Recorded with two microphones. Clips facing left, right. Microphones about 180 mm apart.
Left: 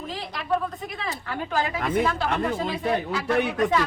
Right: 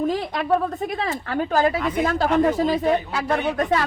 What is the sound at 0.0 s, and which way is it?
A woman's voice, 50° right (ahead or behind).